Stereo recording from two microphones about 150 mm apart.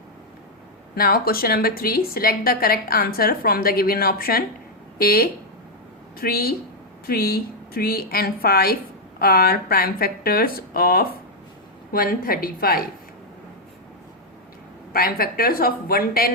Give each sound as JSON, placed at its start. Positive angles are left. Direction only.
{"t": 0.9, "sound": "a woman's voice", "side_deg": 90}
{"t": 14.9, "sound": "a woman's voice", "side_deg": 80}